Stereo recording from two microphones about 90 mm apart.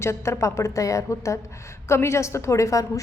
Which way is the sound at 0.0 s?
30° left (ahead or behind).